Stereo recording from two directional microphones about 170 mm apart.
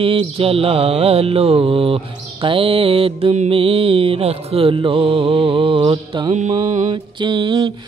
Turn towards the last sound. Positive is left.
turn(degrees=-25)  # may be behind; listen again after turning